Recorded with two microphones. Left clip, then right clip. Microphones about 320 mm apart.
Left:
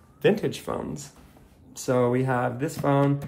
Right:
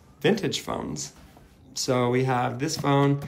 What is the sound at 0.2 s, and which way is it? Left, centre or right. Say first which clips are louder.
Speech: left 1 dB; centre.